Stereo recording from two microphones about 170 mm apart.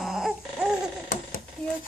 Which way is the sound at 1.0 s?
55° left (ahead or behind).